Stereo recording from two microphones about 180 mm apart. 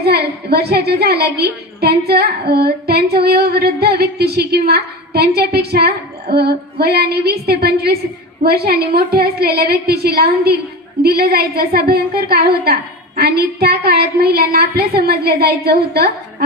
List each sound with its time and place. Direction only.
0.0 s a woman's voice: 60° right (ahead or behind)